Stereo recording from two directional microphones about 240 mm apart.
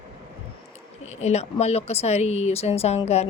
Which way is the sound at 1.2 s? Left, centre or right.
Left.